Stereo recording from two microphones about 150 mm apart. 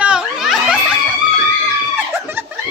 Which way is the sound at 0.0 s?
5° right (ahead or behind).